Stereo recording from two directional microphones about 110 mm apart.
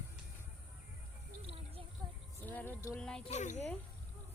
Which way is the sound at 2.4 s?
15° left (ahead or behind).